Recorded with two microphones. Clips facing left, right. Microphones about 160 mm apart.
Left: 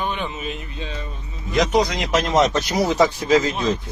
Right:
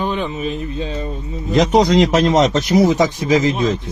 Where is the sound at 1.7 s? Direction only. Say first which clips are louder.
Right 11 dB; 60° right (ahead or behind).